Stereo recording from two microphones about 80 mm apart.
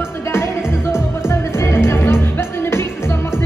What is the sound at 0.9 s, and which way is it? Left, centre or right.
Music, left.